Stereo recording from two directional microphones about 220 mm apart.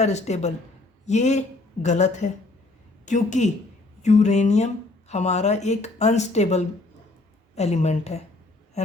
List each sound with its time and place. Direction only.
0.0 s a woman's voice: 30° left (ahead or behind)